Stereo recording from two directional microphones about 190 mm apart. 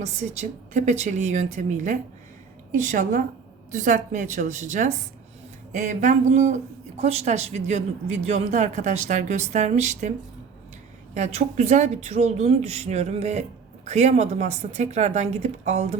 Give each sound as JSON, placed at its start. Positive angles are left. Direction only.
{"t": 0.0, "sound": "a woman's voice", "side_deg": -35}
{"t": 11.1, "sound": "speech", "side_deg": -35}